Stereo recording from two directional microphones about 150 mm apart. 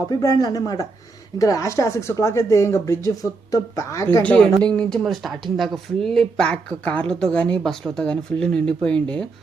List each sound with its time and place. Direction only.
0.1 s speech: 25° left (ahead or behind)
4.2 s speech: 5° left (ahead or behind)